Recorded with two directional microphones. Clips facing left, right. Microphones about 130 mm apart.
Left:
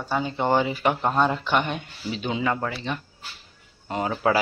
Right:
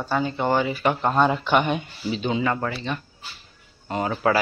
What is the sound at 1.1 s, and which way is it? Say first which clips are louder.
Speech: right 2 dB; 5° right (ahead or behind).